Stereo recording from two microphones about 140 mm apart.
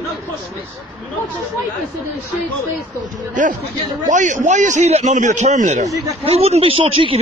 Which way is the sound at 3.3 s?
65° right (ahead or behind).